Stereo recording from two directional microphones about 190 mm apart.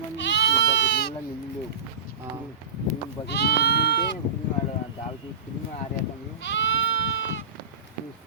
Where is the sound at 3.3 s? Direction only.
60° left (ahead or behind).